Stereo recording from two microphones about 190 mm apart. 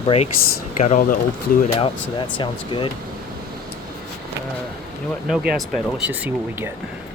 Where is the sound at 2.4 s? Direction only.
25° left (ahead or behind).